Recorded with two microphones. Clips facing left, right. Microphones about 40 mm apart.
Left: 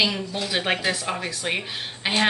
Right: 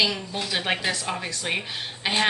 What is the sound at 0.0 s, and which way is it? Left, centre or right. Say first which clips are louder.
A woman's voice: left 1 dB; centre.